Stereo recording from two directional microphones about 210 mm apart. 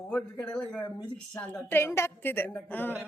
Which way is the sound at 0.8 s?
20° left (ahead or behind).